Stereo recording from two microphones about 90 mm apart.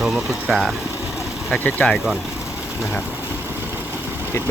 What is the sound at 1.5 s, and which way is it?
Speech, 10° left (ahead or behind).